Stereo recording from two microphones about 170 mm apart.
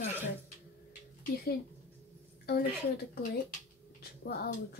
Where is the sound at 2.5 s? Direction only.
65° left (ahead or behind).